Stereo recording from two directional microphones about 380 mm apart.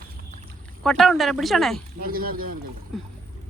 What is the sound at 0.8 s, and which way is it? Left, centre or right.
Speech, centre.